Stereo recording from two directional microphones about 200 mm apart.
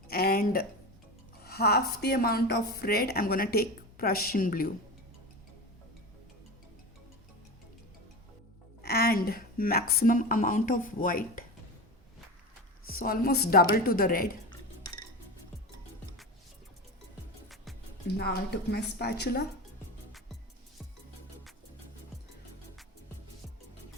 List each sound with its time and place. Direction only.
0.1 s a sound: 50° left (ahead or behind)
1.5 s a woman's voice: 50° left (ahead or behind)
8.8 s a woman's voice: 50° left (ahead or behind)
12.9 s a woman's voice: 50° left (ahead or behind)
18.2 s a woman's voice: 55° left (ahead or behind)